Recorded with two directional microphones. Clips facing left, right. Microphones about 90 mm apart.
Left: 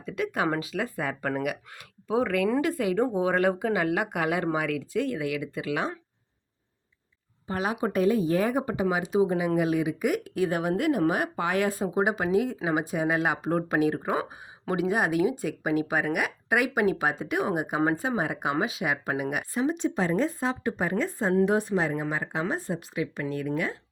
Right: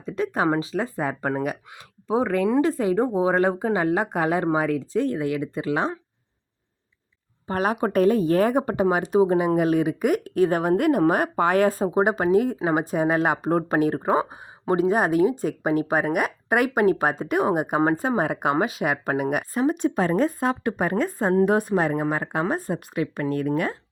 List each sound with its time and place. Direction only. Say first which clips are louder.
0.0 s a woman's voice: right 4 dB; 30° right (ahead or behind)
7.4 s speech: right 5 dB; 50° right (ahead or behind)